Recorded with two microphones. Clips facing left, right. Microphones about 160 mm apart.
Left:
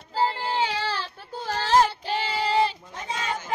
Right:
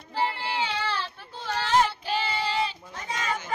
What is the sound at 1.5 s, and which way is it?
Child singing, 35° left (ahead or behind).